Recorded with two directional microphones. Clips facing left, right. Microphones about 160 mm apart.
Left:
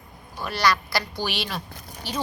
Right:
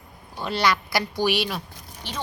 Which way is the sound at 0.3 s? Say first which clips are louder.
Even; 20° right (ahead or behind).